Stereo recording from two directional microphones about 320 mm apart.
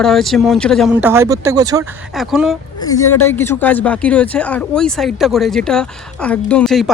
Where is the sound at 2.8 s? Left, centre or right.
Centre.